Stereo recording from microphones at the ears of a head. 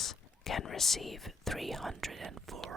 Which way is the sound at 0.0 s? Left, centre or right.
Left.